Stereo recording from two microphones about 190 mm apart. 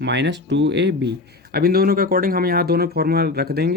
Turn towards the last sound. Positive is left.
turn(degrees=-55)  # may be behind; listen again after turning